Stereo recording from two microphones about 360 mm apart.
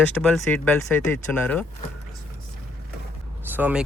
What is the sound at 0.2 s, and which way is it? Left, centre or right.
Speech, centre.